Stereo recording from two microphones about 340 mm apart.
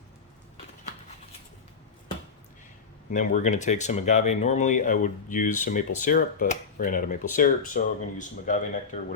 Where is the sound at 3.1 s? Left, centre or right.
Left.